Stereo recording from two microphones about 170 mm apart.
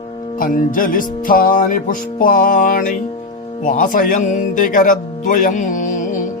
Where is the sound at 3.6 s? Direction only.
50° left (ahead or behind).